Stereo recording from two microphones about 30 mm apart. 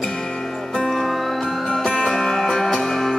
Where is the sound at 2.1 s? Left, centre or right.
Centre.